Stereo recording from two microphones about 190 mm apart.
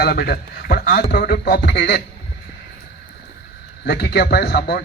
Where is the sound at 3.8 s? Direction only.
60° left (ahead or behind).